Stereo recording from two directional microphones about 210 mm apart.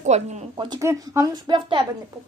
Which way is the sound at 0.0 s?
35° right (ahead or behind).